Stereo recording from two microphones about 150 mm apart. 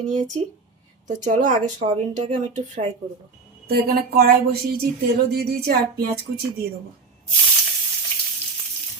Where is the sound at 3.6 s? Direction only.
85° right.